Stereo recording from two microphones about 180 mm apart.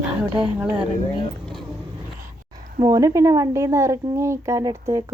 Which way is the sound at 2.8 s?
20° right (ahead or behind).